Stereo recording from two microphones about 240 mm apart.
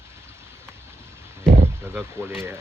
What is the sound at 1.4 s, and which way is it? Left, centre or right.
Speech, centre.